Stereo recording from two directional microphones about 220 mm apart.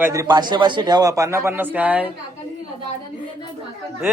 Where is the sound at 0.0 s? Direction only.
15° right (ahead or behind).